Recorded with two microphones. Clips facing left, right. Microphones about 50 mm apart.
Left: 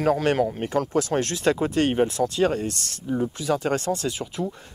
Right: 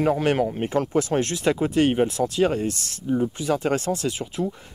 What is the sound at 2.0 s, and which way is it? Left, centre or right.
Speech, left.